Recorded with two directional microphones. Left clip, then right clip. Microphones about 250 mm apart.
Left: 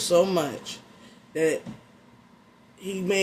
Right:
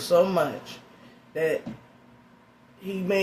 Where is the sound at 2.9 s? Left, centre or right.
Left.